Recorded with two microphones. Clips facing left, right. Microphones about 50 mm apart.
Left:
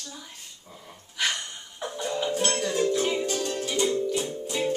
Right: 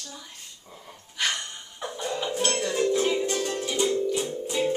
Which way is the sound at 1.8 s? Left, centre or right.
Centre.